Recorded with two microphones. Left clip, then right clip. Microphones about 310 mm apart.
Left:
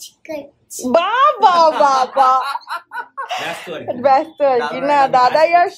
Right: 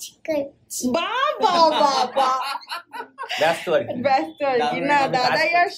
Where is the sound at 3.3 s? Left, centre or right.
Centre.